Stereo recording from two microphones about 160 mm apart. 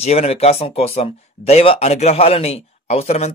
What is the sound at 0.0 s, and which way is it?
Speech, 40° left (ahead or behind).